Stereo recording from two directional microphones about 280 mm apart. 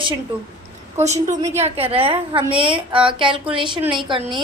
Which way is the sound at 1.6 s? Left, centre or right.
Right.